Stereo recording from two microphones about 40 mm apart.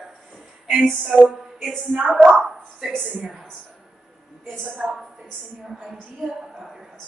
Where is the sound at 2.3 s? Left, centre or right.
Centre.